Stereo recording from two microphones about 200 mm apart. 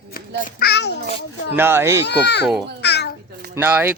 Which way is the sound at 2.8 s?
55° left (ahead or behind).